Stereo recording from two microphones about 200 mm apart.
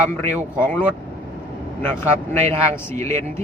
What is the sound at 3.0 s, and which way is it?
Speech, 15° left (ahead or behind).